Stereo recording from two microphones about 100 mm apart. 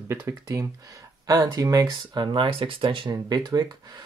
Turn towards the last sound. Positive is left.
turn(degrees=-40)  # may be behind; listen again after turning